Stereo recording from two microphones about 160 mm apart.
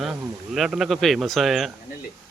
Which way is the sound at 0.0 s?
Centre (ahead or behind).